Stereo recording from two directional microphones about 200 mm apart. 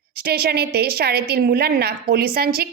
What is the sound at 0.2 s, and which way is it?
A woman's voice, 50° right (ahead or behind).